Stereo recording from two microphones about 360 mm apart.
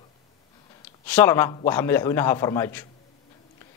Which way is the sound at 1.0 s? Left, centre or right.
Centre.